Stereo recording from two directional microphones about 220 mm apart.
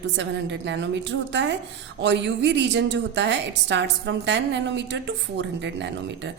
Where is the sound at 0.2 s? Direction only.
55° right (ahead or behind).